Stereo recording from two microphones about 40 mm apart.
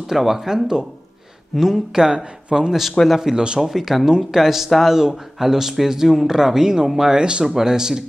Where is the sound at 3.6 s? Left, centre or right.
Centre; by 7.4 s right.